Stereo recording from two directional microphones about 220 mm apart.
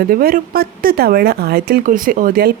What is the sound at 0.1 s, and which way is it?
Speech, 40° right (ahead or behind).